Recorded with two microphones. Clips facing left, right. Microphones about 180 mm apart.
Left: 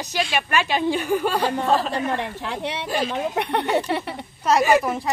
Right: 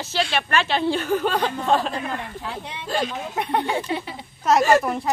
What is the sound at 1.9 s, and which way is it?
A woman's voice, 75° left (ahead or behind).